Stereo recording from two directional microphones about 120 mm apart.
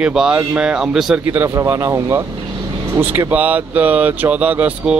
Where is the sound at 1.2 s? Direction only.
15° right (ahead or behind).